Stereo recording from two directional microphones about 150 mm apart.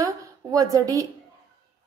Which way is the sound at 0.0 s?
20° right (ahead or behind).